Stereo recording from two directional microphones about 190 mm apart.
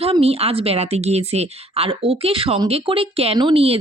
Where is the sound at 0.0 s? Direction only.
30° right (ahead or behind).